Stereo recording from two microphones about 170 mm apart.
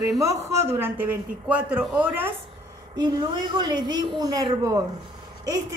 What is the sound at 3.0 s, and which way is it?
A woman's voice, 25° right (ahead or behind).